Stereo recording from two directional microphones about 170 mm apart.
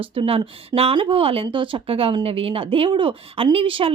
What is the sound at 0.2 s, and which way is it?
Speech, 30° right (ahead or behind).